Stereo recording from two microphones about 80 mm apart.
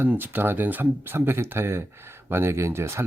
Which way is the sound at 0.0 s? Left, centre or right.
Right.